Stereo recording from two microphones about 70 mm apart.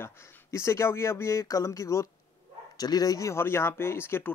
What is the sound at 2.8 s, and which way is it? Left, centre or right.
Speech, left.